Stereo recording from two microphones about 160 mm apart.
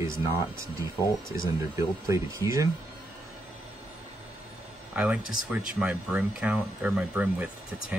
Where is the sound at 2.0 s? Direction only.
20° right (ahead or behind).